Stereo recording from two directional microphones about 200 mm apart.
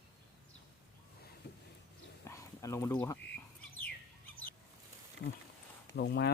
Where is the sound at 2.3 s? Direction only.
15° left (ahead or behind).